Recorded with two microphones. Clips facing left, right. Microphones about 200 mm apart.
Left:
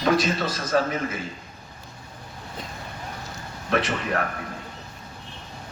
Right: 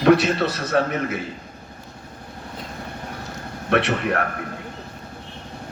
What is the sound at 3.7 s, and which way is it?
Speech, 65° right (ahead or behind).